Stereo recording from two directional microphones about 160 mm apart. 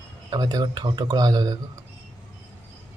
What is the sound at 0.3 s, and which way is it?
Speech, 25° right (ahead or behind).